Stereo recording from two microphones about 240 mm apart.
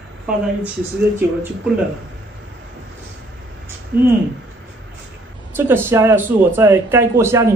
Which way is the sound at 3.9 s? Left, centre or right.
Right.